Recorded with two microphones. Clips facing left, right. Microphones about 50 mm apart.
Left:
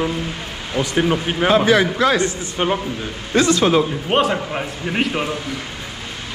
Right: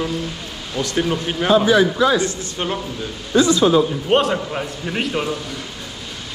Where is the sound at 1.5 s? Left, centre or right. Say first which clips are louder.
Right 2 dB; left.